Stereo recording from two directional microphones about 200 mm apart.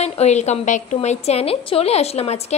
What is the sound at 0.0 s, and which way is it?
A woman's voice, 35° left (ahead or behind).